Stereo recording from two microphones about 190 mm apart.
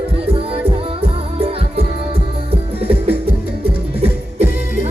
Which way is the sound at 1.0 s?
30° right (ahead or behind).